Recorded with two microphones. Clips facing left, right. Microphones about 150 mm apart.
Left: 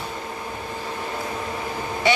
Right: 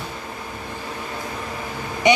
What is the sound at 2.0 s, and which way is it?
Quack, 20° right (ahead or behind).